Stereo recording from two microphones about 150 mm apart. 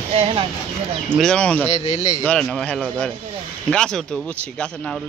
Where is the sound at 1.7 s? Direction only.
50° left (ahead or behind).